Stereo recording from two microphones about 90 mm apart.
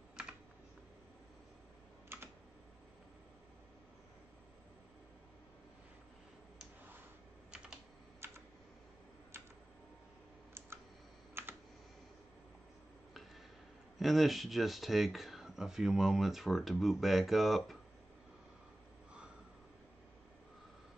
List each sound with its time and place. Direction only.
0.1 s computer keyboard: 10° right (ahead or behind)
8.2 s computer keyboard: 25° right (ahead or behind)
9.3 s a sound: 25° right (ahead or behind)
11.4 s computer keyboard: 25° right (ahead or behind)
13.9 s speech: centre (ahead or behind)